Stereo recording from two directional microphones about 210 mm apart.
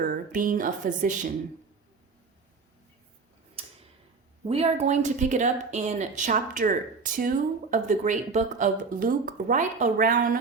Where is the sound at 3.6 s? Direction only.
25° right (ahead or behind).